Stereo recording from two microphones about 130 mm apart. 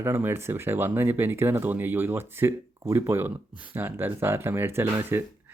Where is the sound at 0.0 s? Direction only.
20° right (ahead or behind).